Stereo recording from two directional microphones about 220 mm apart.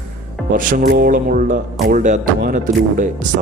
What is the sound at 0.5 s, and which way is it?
Speech, 40° right (ahead or behind).